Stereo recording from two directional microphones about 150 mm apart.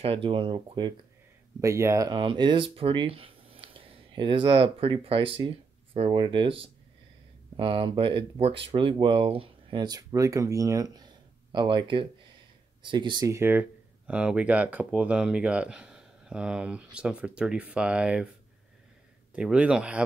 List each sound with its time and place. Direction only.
0.0 s speech: 35° right (ahead or behind)
1.6 s speech: 20° right (ahead or behind)
13.3 s speech: 15° right (ahead or behind)
19.3 s speech: 5° right (ahead or behind)